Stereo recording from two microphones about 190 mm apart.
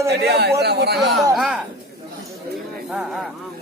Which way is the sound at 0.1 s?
60° right (ahead or behind).